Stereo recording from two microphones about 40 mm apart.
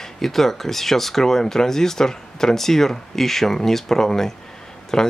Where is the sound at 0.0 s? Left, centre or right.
Centre.